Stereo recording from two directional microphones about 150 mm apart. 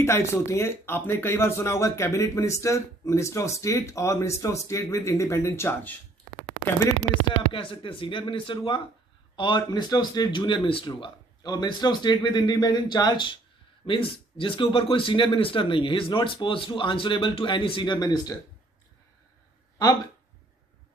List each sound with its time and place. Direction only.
0.0 s speech: 15° left (ahead or behind)
7.5 s speech: 35° left (ahead or behind)